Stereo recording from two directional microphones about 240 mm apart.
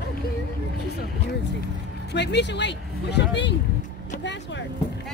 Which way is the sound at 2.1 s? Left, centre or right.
Left.